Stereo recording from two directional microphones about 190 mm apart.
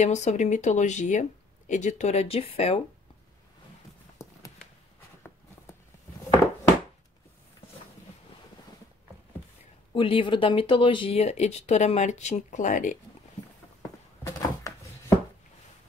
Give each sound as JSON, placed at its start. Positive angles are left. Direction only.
{"t": 0.0, "sound": "speech", "side_deg": 40}
{"t": 9.9, "sound": "speech", "side_deg": 25}
{"t": 14.2, "sound": "a sound", "side_deg": 15}